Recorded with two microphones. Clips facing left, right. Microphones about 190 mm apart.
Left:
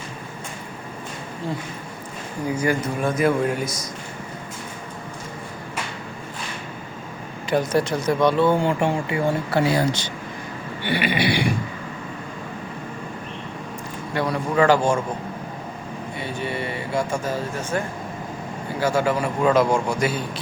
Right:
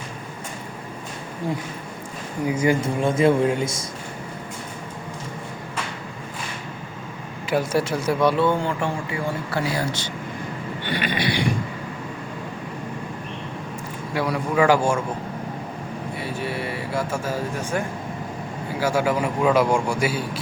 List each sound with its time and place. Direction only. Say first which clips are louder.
2.5 s speech: right 2 dB; 20° right (ahead or behind)
7.5 s a man's voice: left 1 dB; 5° right (ahead or behind)
8.4 s speech: left 3 dB; 15° left (ahead or behind)
10.8 s a sound: left 3 dB; 10° left (ahead or behind)
14.1 s a man's voice: even; 5° right (ahead or behind)
16.1 s a man's voice: left 1 dB; 5° right (ahead or behind)